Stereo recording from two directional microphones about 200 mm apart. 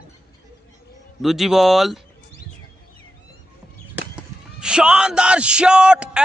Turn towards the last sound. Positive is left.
turn(degrees=-5)  # may be behind; listen again after turning